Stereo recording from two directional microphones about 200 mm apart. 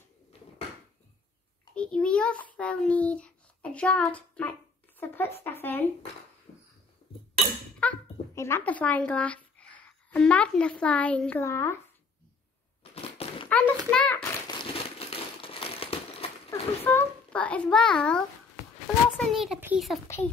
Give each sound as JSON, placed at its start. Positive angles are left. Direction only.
{"t": 1.8, "sound": "a child's voice", "side_deg": 5}
{"t": 7.8, "sound": "speech", "side_deg": 10}
{"t": 12.9, "sound": "thunk", "side_deg": 30}
{"t": 13.5, "sound": "a sound", "side_deg": 5}
{"t": 13.8, "sound": "a child's voice", "side_deg": 10}
{"t": 15.0, "sound": "crumpling", "side_deg": 30}
{"t": 16.4, "sound": "a child's voice", "side_deg": 10}